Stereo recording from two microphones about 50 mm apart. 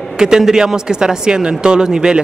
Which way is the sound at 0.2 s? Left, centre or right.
Centre.